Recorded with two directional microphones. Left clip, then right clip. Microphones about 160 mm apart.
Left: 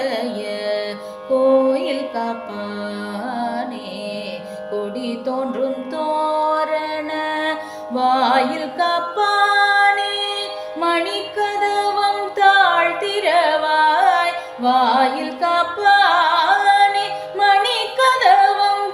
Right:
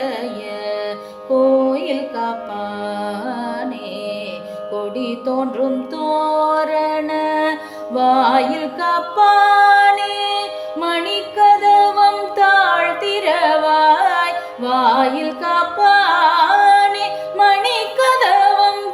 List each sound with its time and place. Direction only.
1.6 s mantra: 15° right (ahead or behind)
4.9 s music: 25° right (ahead or behind); by 18.3 s 45° right (ahead or behind)